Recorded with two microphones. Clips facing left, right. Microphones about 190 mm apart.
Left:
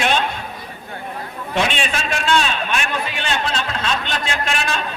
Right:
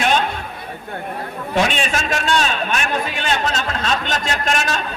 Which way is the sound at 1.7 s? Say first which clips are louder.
Right 2 dB; 40° right (ahead or behind).